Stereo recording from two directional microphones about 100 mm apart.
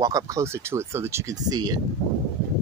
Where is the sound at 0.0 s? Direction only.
35° right (ahead or behind).